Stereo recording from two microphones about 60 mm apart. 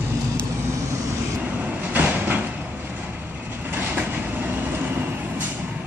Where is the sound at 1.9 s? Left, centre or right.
Right.